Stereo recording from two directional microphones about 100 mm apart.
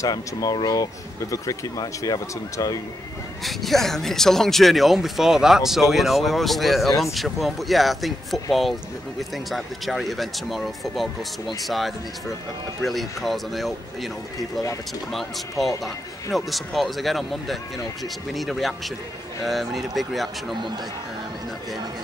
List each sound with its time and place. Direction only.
0.0 s speech: 35° left (ahead or behind)
3.4 s speech: centre (ahead or behind)
15.1 s speech: centre (ahead or behind)